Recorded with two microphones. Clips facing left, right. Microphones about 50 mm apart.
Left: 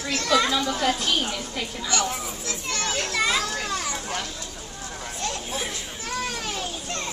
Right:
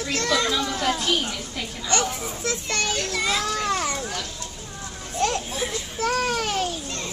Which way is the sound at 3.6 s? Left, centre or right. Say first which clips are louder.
Right 4 dB; right.